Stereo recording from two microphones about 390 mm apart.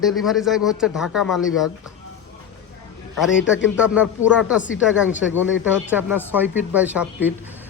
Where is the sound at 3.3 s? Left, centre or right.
Left.